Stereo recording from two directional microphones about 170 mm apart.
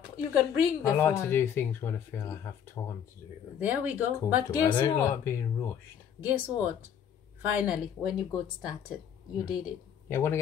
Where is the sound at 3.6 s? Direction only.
10° right (ahead or behind).